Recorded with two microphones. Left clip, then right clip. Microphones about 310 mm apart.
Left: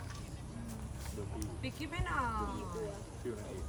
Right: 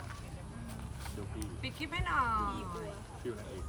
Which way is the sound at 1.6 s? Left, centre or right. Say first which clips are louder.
Right 4 dB; centre.